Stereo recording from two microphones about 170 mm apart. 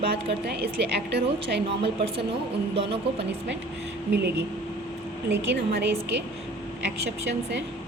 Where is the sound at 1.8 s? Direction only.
35° right (ahead or behind).